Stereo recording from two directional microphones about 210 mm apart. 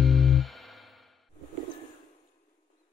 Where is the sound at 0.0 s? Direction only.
Centre (ahead or behind).